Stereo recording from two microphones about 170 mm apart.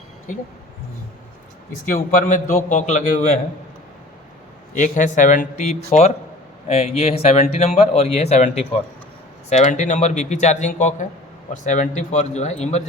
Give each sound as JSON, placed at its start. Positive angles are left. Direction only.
{"t": 0.3, "sound": "a man's voice", "side_deg": 50}
{"t": 1.8, "sound": "a man's voice", "side_deg": 55}
{"t": 4.7, "sound": "a man's voice", "side_deg": 45}